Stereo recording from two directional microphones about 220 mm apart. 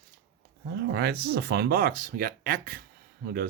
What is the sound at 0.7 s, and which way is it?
Speech, 45° right (ahead or behind).